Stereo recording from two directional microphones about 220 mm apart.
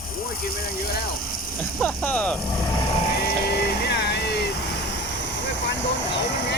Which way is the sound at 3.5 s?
45° left (ahead or behind).